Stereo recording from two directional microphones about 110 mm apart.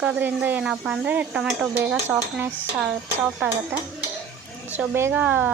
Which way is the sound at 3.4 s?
20° right (ahead or behind).